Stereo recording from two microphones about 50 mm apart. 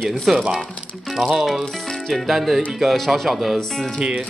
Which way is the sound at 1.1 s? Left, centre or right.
Centre.